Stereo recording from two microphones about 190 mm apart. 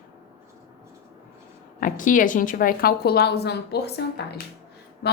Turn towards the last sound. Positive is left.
turn(degrees=60)  # may be behind; listen again after turning